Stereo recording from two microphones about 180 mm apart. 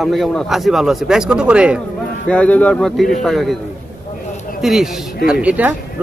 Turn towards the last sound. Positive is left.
turn(degrees=-10)  # may be behind; listen again after turning